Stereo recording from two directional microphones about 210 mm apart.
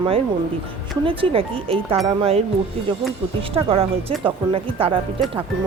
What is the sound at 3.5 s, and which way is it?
Speech, 25° right (ahead or behind).